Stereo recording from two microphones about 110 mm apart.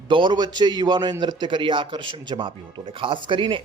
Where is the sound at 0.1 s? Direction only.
45° right (ahead or behind).